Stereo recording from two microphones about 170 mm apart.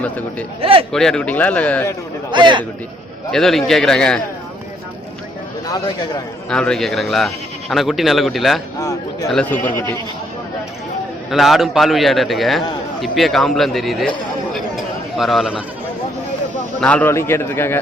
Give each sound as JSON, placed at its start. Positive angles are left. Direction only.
{"t": 0.0, "sound": "speech", "side_deg": 10}
{"t": 0.6, "sound": "speech", "side_deg": -35}
{"t": 0.9, "sound": "speech", "side_deg": 5}
{"t": 2.3, "sound": "a man's voice", "side_deg": -25}
{"t": 3.3, "sound": "speech", "side_deg": 0}
{"t": 5.6, "sound": "speech", "side_deg": 25}
{"t": 6.5, "sound": "speech", "side_deg": 5}
{"t": 11.3, "sound": "speech", "side_deg": 0}
{"t": 15.2, "sound": "speech", "side_deg": 0}
{"t": 16.8, "sound": "speech", "side_deg": 10}